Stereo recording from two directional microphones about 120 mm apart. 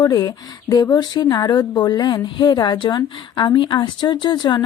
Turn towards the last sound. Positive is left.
turn(degrees=40)  # may be behind; listen again after turning